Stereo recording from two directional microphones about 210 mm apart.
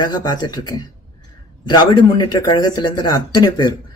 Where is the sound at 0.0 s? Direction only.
20° left (ahead or behind).